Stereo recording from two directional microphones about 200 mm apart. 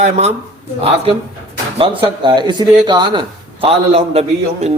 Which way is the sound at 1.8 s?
25° right (ahead or behind).